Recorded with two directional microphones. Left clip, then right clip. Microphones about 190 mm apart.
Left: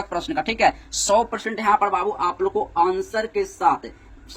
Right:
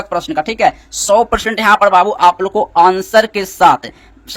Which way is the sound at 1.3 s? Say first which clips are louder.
Right 9 dB; 50° right (ahead or behind).